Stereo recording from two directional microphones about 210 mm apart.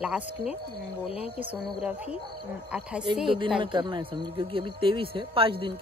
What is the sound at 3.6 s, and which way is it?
Speech, 20° right (ahead or behind).